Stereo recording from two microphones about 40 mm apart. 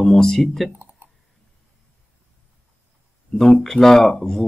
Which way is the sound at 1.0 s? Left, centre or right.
Right.